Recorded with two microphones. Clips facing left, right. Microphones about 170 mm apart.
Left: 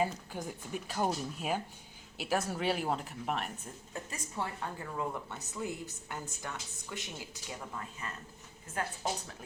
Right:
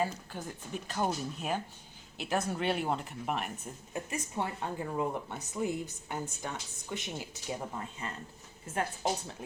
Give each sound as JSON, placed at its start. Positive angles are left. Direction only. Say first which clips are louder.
{"t": 0.0, "sound": "speech", "louder": "even", "side_deg": 15}
{"t": 3.9, "sound": "speech", "louder": "right 4 dB", "side_deg": -20}